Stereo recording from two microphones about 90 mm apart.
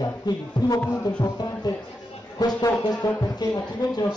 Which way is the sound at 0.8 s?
15° left (ahead or behind).